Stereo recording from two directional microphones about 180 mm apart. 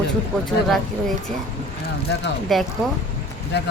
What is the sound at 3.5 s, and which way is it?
Speech, 70° left (ahead or behind).